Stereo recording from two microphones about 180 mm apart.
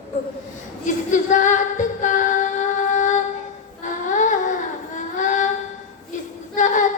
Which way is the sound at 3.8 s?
45° left (ahead or behind).